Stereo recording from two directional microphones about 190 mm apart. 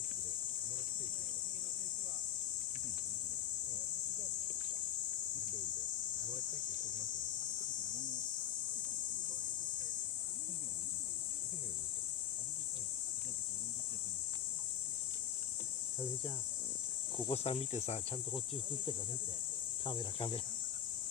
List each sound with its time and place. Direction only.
17.2 s speech: 30° left (ahead or behind)
19.8 s speech: 25° left (ahead or behind)